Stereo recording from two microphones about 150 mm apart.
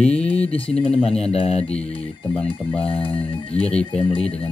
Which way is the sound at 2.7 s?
40° left (ahead or behind).